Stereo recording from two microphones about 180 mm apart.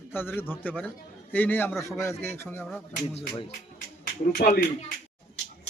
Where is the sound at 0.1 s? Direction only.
10° left (ahead or behind).